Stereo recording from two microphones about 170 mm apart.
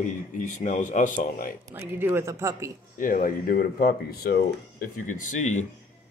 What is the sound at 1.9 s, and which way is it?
Speech, 15° right (ahead or behind).